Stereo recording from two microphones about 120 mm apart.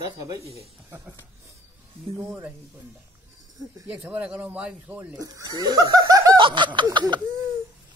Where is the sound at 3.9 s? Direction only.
10° right (ahead or behind).